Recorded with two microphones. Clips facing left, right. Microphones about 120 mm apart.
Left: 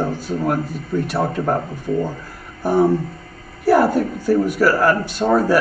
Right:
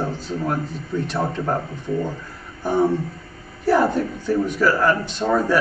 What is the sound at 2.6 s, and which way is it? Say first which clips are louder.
A man's voice: left 3 dB; 10° left (ahead or behind).